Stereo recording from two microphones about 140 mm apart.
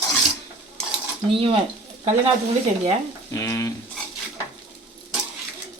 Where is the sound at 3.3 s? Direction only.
20° left (ahead or behind).